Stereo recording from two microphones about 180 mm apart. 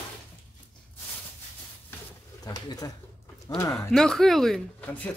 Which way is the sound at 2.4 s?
20° left (ahead or behind).